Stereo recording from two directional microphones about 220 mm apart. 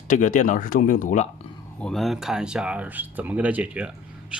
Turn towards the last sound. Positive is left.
turn(degrees=-5)  # may be behind; listen again after turning